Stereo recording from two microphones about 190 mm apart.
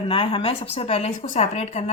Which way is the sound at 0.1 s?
30° left (ahead or behind).